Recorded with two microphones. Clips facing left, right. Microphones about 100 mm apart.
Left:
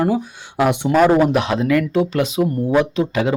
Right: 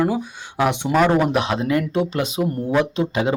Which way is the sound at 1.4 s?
35° right (ahead or behind).